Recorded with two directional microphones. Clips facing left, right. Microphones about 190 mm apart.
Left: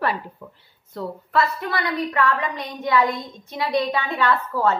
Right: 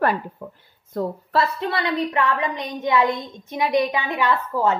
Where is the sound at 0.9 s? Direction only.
40° right (ahead or behind); by 4.7 s 15° right (ahead or behind).